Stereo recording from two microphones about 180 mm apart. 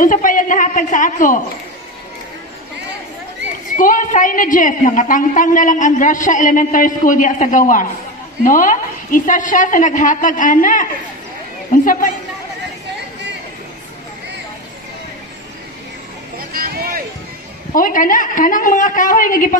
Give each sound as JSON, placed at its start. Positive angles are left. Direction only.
{"t": 0.0, "sound": "a woman's voice", "side_deg": 45}
{"t": 3.7, "sound": "a woman's voice", "side_deg": 45}
{"t": 16.3, "sound": "vehicle", "side_deg": -55}
{"t": 17.7, "sound": "a woman's voice", "side_deg": 50}